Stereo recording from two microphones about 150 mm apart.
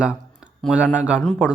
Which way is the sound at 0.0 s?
5° right (ahead or behind).